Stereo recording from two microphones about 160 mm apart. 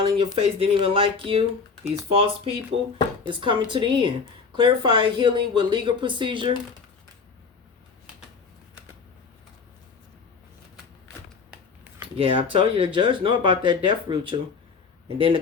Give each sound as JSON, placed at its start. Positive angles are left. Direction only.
{"t": 0.0, "sound": "speech", "side_deg": -35}
{"t": 12.1, "sound": "speech", "side_deg": -35}